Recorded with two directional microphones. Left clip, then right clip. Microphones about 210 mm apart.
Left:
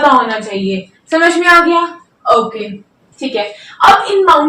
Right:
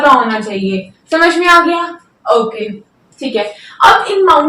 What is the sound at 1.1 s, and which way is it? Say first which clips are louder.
Speech: even; 15° right (ahead or behind).